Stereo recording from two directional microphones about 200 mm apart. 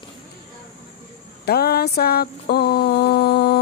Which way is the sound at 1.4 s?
50° left (ahead or behind).